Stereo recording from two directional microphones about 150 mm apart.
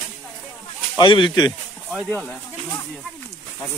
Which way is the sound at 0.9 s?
35° left (ahead or behind).